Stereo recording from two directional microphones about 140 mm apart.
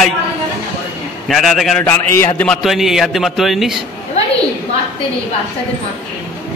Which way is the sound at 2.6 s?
Centre (ahead or behind).